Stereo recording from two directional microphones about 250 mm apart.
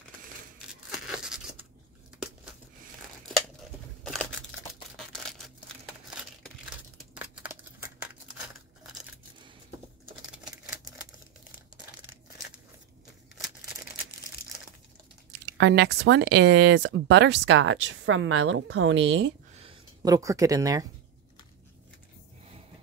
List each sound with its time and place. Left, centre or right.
0.7 s tearing: centre
4.0 s scissors: centre
4.9 s single-lens reflex camera: centre
6.0 s crushing: centre
7.2 s a sound: centre
15.4 s speech: right
19.5 s a sound: right